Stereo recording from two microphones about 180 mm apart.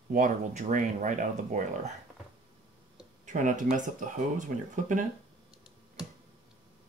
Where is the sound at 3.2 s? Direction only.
45° right (ahead or behind).